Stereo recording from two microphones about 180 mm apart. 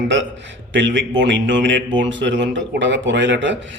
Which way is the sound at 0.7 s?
90° right.